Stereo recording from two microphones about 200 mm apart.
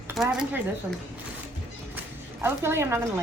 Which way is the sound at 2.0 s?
10° right (ahead or behind).